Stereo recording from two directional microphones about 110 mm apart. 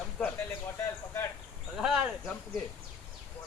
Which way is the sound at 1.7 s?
5° right (ahead or behind).